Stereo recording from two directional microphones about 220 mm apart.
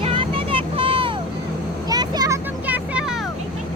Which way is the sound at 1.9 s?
15° right (ahead or behind).